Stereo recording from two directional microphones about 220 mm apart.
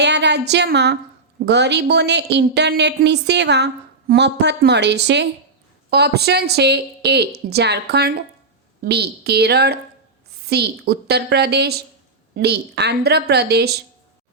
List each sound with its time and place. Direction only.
0.0 s a woman's voice: 50° right (ahead or behind)